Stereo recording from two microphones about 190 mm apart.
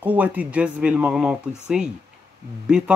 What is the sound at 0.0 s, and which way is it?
Speech, 10° right (ahead or behind).